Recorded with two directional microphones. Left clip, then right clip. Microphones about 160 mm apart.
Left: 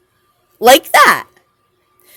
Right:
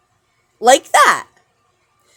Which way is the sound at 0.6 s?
30° left (ahead or behind).